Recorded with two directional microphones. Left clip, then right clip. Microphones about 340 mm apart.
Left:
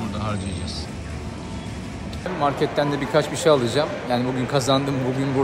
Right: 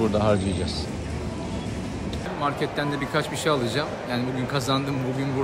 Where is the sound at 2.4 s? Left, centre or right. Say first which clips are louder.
Left 5 dB; centre.